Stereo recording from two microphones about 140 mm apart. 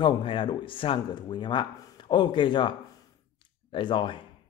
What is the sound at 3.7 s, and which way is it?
Speech, 35° left (ahead or behind).